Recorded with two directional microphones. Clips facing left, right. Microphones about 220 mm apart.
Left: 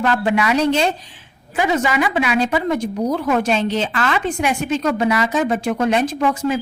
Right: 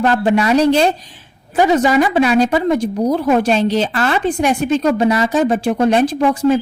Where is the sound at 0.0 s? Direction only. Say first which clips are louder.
Right 4 dB; 35° right (ahead or behind).